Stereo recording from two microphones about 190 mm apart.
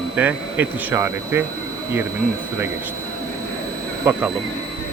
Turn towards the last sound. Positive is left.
turn(degrees=-10)  # may be behind; listen again after turning